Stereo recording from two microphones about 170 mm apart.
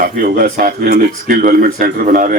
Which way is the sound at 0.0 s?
60° right (ahead or behind).